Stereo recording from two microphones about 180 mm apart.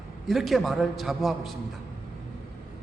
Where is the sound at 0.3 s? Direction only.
Centre (ahead or behind).